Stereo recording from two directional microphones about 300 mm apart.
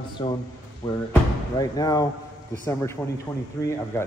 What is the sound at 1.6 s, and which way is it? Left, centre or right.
Speech, centre.